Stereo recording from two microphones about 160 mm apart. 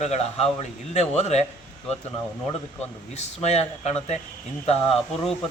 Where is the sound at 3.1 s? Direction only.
40° left (ahead or behind).